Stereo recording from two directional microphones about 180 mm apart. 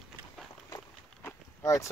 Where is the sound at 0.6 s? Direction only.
15° left (ahead or behind).